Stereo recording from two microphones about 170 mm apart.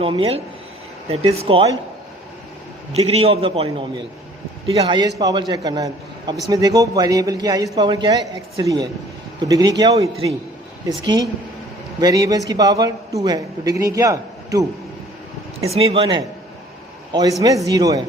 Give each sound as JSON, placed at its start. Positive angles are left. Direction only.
{"t": 0.0, "sound": "a man's voice", "side_deg": -30}
{"t": 2.9, "sound": "a man's voice", "side_deg": -40}
{"t": 15.6, "sound": "a man's voice", "side_deg": -35}